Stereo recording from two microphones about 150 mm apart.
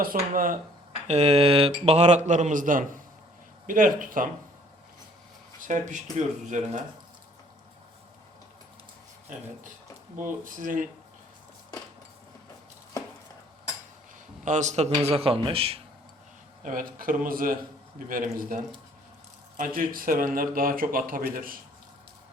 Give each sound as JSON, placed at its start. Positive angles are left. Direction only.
{"t": 0.0, "sound": "speech", "side_deg": -70}
{"t": 1.0, "sound": "speech", "side_deg": -45}
{"t": 5.5, "sound": "speech", "side_deg": -55}
{"t": 10.2, "sound": "speech", "side_deg": -60}
{"t": 14.4, "sound": "speech", "side_deg": -55}
{"t": 16.6, "sound": "speech", "side_deg": -65}